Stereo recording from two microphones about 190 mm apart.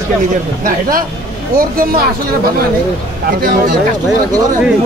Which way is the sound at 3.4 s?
50° right (ahead or behind).